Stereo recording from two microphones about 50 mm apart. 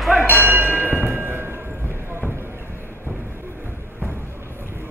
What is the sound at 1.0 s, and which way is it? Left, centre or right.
Music, right.